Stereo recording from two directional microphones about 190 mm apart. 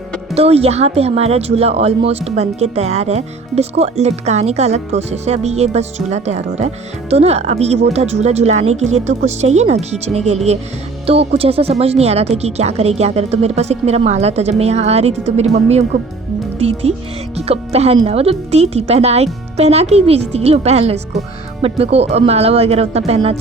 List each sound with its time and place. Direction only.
0.3 s speech: 30° right (ahead or behind)
16.6 s speech: 35° right (ahead or behind)